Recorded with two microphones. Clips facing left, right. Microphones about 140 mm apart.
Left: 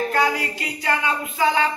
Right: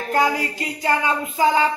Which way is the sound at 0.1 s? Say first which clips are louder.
Right 2 dB; 35° right (ahead or behind).